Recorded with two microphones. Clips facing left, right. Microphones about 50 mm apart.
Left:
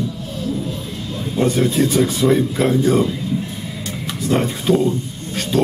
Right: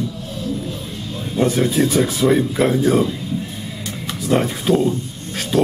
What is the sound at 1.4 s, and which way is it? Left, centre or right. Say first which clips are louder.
A man's voice: even; centre.